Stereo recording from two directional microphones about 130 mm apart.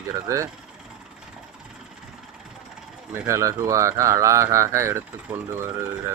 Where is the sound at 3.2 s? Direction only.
25° right (ahead or behind).